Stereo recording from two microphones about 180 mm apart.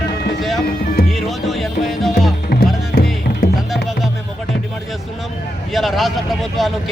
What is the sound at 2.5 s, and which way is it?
Music, 60° left (ahead or behind).